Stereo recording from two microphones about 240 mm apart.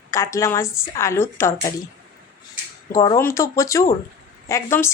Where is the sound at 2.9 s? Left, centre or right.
Centre.